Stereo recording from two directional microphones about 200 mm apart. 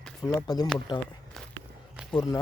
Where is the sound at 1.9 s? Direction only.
5° right (ahead or behind).